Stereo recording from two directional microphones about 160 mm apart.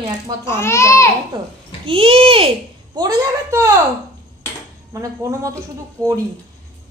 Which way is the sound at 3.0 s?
25° right (ahead or behind).